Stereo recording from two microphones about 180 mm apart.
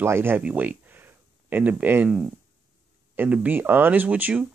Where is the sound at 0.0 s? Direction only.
15° right (ahead or behind).